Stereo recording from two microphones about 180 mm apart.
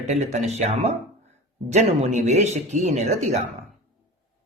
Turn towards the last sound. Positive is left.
turn(degrees=-40)  # may be behind; listen again after turning